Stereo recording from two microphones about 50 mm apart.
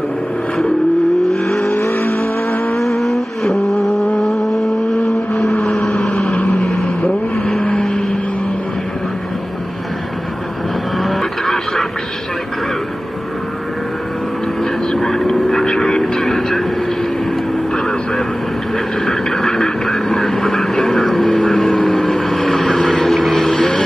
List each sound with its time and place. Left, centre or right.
1.3 s vehicle: centre
1.7 s vehicle: left
2.7 s vehicle: centre
5.5 s vehicle: left
11.0 s vehicle: centre
14.6 s vehicle: centre
17.7 s vehicle: centre